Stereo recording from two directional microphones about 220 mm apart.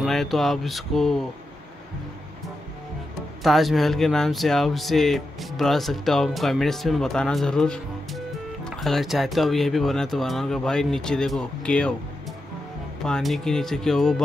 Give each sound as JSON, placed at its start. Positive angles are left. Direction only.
{"t": 0.0, "sound": "speech", "side_deg": 0}
{"t": 3.4, "sound": "speech", "side_deg": 0}
{"t": 13.0, "sound": "speech", "side_deg": 0}